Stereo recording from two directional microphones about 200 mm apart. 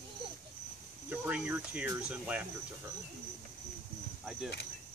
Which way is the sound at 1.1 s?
5° right (ahead or behind).